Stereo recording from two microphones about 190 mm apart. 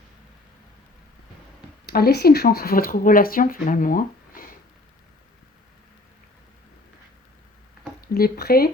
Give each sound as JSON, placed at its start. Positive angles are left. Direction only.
{"t": 1.9, "sound": "speech", "side_deg": 55}
{"t": 8.0, "sound": "speech", "side_deg": 55}